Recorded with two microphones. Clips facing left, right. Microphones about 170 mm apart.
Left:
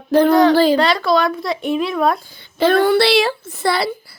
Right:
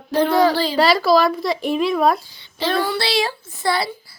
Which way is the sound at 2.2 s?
50° left (ahead or behind).